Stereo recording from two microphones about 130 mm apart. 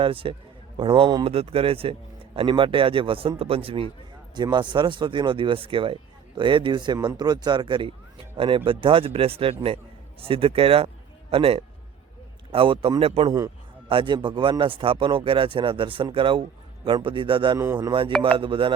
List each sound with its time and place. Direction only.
0.0 s speech: 40° right (ahead or behind)
4.4 s a man's voice: 35° right (ahead or behind)